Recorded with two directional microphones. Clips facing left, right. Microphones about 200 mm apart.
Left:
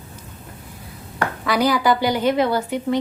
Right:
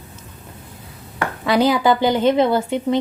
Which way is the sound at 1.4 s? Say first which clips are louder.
Right 3 dB; 25° right (ahead or behind).